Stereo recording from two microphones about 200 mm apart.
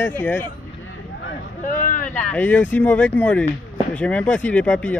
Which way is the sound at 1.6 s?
40° left (ahead or behind).